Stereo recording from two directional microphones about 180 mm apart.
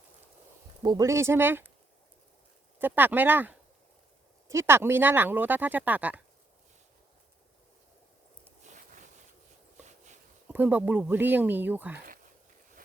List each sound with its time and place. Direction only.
0.8 s speech: 20° right (ahead or behind)
2.7 s speech: 10° right (ahead or behind)
9.8 s a sound: 40° right (ahead or behind)
10.5 s speech: 10° right (ahead or behind)